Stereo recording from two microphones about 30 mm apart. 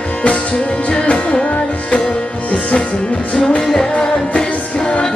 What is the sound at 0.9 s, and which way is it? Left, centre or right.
Music, left.